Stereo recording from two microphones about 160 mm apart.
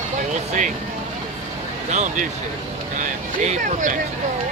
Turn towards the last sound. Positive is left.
turn(degrees=-55)  # may be behind; listen again after turning